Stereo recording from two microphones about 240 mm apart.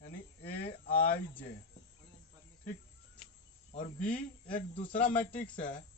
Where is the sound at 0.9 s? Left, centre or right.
Left.